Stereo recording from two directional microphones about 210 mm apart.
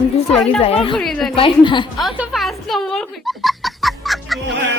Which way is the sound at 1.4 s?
25° left (ahead or behind).